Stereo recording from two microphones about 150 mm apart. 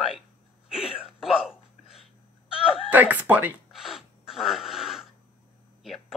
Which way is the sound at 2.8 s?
10° right (ahead or behind).